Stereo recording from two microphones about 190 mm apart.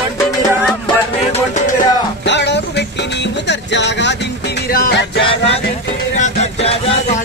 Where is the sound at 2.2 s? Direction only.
65° left (ahead or behind).